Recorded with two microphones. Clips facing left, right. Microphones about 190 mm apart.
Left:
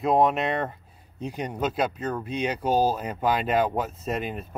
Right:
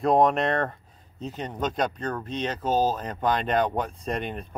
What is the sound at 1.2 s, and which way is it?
Speech, 10° left (ahead or behind).